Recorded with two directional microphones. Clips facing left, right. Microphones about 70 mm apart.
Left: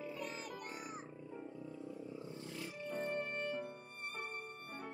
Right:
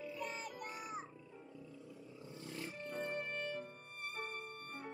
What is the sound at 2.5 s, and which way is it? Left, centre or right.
Music, right.